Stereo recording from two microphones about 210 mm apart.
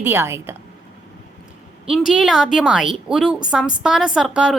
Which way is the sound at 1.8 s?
5° right (ahead or behind).